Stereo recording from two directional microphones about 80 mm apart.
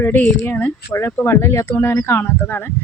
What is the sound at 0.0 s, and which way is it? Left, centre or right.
Speech, left.